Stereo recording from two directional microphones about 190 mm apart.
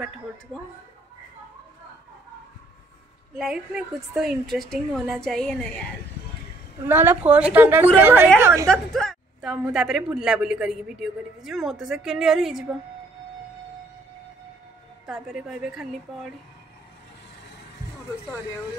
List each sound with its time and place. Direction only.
3.3 s a man's voice: 5° right (ahead or behind)
6.9 s a woman's voice: 10° right (ahead or behind)
8.6 s a man's voice: centre (ahead or behind)
15.0 s a man's voice: 5° right (ahead or behind)